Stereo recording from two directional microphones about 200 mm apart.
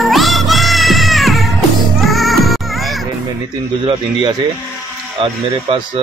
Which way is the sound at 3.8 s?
20° right (ahead or behind).